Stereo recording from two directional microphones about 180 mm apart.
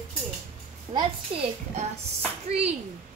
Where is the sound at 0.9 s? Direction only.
30° right (ahead or behind).